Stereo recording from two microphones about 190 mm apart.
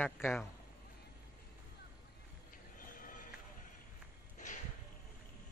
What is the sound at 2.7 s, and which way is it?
Music, 45° left (ahead or behind).